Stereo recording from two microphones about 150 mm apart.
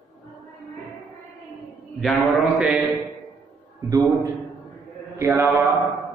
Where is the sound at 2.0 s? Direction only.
Centre (ahead or behind).